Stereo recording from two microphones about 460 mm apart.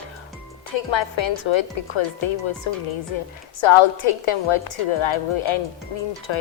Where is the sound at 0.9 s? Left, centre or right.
Left.